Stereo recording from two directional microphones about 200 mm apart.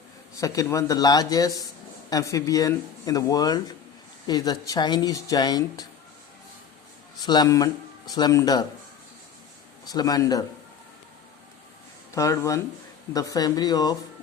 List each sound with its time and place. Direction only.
0.3 s speech: 15° left (ahead or behind)
7.3 s speech: 20° left (ahead or behind)
9.8 s speech: 20° left (ahead or behind)
12.1 s speech: 15° left (ahead or behind)